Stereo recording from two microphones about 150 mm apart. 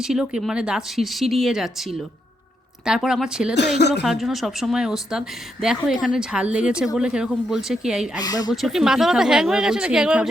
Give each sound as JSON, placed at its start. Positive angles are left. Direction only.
{"t": 0.1, "sound": "speech", "side_deg": -5}
{"t": 2.8, "sound": "speech", "side_deg": -5}
{"t": 8.2, "sound": "speech", "side_deg": 25}
{"t": 8.6, "sound": "speech", "side_deg": -5}